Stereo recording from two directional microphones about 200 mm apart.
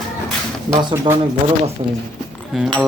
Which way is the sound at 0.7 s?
20° right (ahead or behind).